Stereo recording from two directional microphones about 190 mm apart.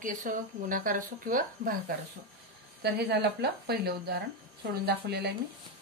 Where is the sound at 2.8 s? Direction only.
60° right (ahead or behind).